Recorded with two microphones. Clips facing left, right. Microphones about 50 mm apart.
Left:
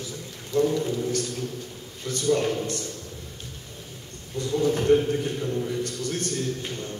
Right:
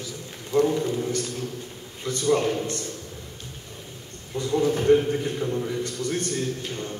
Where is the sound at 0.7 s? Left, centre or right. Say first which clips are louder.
Right 1 dB; right.